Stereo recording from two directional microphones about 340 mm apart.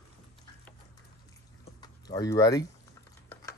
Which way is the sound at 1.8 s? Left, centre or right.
Centre.